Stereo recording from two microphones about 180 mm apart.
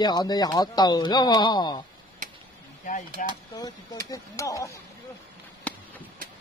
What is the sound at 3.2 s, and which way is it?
Speech, 50° left (ahead or behind).